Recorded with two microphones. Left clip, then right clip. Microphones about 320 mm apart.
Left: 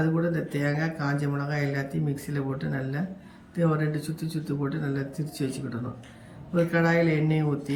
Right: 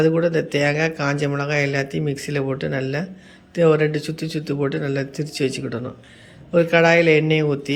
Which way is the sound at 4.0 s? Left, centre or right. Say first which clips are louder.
Right 8 dB; right.